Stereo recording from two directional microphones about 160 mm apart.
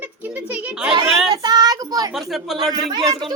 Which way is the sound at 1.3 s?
25° right (ahead or behind).